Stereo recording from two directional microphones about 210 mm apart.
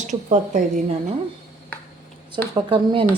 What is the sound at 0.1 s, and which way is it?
Speech, 35° right (ahead or behind).